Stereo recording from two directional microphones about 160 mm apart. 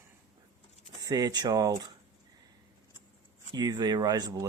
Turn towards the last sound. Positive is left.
turn(degrees=-25)  # may be behind; listen again after turning